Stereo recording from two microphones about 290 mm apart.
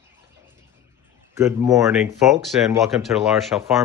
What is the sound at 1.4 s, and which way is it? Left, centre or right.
Speech, centre.